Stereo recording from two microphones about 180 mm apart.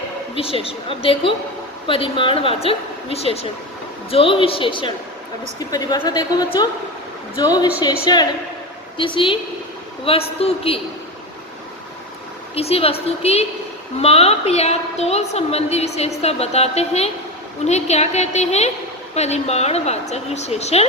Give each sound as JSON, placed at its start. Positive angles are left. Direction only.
{"t": 0.3, "sound": "a woman's voice", "side_deg": 30}
{"t": 12.5, "sound": "a woman's voice", "side_deg": 35}